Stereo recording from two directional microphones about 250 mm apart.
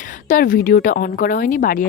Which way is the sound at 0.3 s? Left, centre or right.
Left.